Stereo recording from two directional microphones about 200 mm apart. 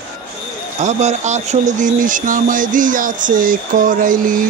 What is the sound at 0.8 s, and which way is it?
Speech, 35° right (ahead or behind).